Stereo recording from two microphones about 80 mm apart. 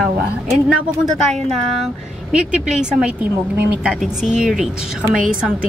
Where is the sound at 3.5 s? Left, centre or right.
Right.